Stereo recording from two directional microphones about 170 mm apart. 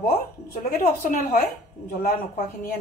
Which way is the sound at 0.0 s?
65° left (ahead or behind).